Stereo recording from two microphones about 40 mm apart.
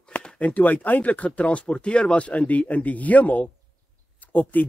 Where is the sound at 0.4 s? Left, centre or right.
Left.